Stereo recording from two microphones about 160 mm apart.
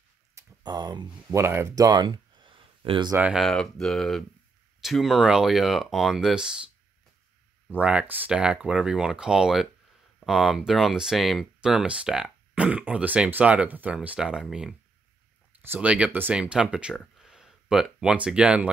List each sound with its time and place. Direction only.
0.3 s a sound: 20° right (ahead or behind)
1.3 s speech: 15° right (ahead or behind)
3.2 s speech: 5° right (ahead or behind)
7.7 s speech: 10° right (ahead or behind)